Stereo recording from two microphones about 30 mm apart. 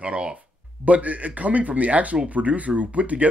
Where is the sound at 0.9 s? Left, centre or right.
Right.